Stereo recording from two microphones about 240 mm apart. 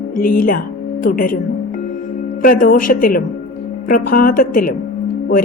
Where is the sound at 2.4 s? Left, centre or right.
Left.